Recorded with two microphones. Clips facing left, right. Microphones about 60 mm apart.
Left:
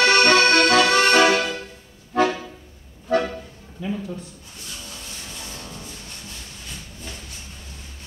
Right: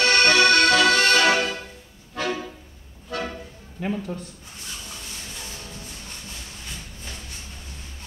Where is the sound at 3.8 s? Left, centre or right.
Right.